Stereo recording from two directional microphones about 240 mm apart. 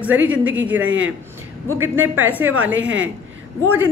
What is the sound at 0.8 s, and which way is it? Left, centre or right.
Speech, right.